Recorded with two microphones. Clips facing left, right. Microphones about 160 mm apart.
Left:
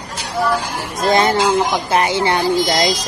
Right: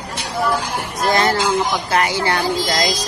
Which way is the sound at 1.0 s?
25° left (ahead or behind).